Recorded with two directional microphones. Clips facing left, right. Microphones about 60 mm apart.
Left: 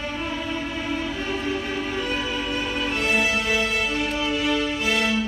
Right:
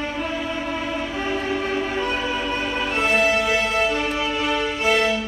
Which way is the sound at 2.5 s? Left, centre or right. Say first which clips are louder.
Right 2 dB; right.